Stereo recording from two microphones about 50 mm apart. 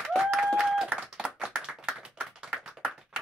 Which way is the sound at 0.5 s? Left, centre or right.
Centre.